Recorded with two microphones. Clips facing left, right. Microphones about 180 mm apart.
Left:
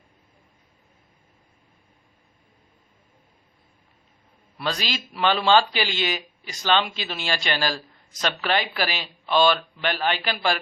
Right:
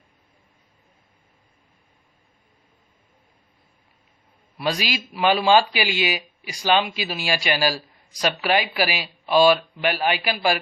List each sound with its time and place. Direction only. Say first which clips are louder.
4.5 s a man's voice: right 3 dB; 15° right (ahead or behind)